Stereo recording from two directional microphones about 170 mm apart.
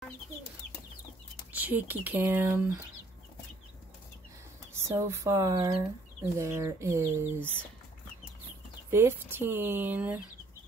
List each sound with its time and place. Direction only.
1.5 s speech: 10° right (ahead or behind)
4.7 s speech: 15° right (ahead or behind)
8.9 s speech: 15° right (ahead or behind)